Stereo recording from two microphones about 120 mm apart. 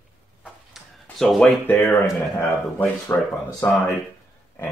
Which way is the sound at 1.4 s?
15° left (ahead or behind).